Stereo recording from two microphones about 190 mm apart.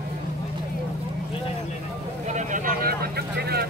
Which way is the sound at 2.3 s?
45° right (ahead or behind).